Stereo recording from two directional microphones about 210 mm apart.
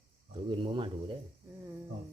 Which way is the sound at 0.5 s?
25° right (ahead or behind).